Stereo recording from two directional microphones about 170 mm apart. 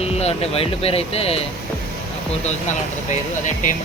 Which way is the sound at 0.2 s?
35° left (ahead or behind).